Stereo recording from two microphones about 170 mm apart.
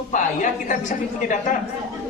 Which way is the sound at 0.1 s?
50° left (ahead or behind).